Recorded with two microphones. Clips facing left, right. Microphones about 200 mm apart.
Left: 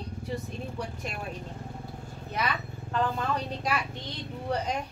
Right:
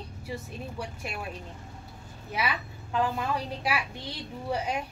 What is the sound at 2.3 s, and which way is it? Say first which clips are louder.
A woman's voice: even; 10° right (ahead or behind).